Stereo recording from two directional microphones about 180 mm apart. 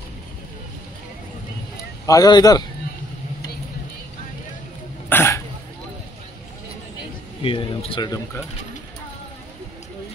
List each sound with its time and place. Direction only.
2.0 s speech: 20° left (ahead or behind)
5.1 s throat clearing: 15° left (ahead or behind)
7.4 s speech: 30° left (ahead or behind)